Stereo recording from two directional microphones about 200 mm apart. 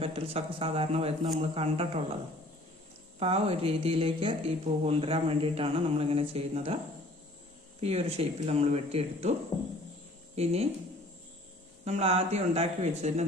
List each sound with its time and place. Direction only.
0.0 s speech: 30° right (ahead or behind)
3.2 s speech: 30° right (ahead or behind)
7.8 s speech: 30° right (ahead or behind)
9.5 s speech: 15° left (ahead or behind)
10.3 s speech: 30° right (ahead or behind)
11.9 s speech: 30° right (ahead or behind)